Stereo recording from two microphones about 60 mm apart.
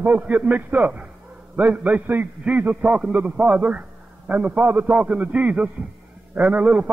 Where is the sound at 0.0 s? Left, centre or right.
Right.